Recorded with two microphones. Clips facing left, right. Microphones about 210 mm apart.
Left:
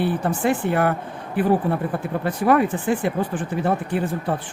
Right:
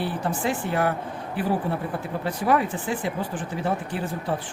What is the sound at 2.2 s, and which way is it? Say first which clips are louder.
Speech: left 5 dB; 55° left (ahead or behind).